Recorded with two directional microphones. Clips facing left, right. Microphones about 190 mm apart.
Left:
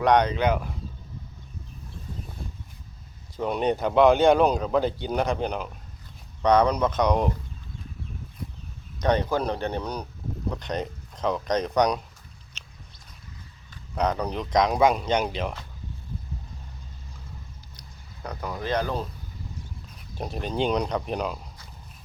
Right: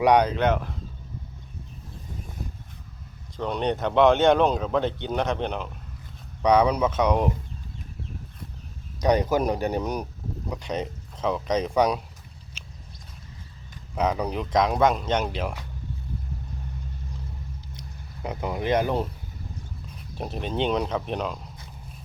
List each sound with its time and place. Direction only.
0.0 s speech: 10° right (ahead or behind)
3.3 s speech: 5° left (ahead or behind)
9.0 s speech: 15° right (ahead or behind)
10.5 s speech: 5° right (ahead or behind)
13.9 s speech: 5° right (ahead or behind)
18.2 s speech: 20° right (ahead or behind)
20.1 s speech: centre (ahead or behind)